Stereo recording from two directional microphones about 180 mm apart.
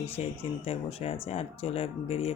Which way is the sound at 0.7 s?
35° left (ahead or behind).